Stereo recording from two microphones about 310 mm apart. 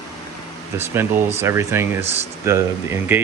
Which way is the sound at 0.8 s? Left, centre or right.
Centre.